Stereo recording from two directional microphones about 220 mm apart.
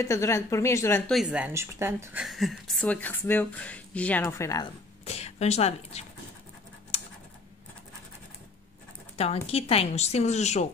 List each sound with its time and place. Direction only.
0.0 s a woman's voice: 15° left (ahead or behind)
5.0 s speech: 30° left (ahead or behind)
6.9 s scratch: 30° left (ahead or behind)
9.1 s speech: 30° left (ahead or behind)